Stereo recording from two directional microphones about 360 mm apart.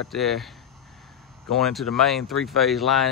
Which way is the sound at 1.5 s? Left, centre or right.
Centre.